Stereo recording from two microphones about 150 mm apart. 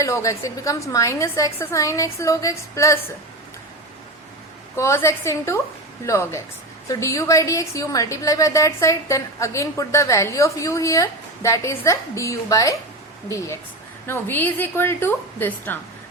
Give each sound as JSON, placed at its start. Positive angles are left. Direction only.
{"t": 0.0, "sound": "a woman's voice", "side_deg": 20}
{"t": 4.8, "sound": "a woman's voice", "side_deg": 20}